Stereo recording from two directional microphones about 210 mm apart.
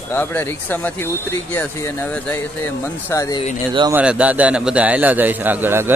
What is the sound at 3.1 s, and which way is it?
Speech, 15° left (ahead or behind).